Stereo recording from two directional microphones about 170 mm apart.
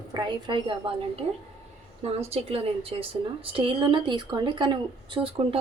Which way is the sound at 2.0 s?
35° right (ahead or behind).